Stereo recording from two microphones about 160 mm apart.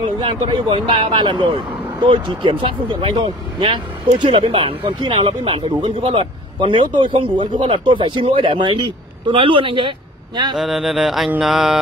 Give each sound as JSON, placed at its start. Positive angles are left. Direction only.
{"t": 0.2, "sound": "a man's voice", "side_deg": -30}
{"t": 10.5, "sound": "music", "side_deg": 0}